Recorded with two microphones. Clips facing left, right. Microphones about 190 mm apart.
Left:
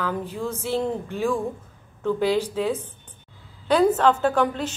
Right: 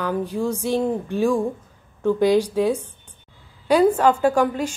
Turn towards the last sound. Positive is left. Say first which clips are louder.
# right 3 dB
turn(degrees=-10)  # may be behind; listen again after turning